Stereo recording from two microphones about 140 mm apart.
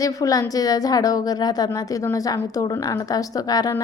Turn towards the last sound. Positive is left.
turn(degrees=25)  # may be behind; listen again after turning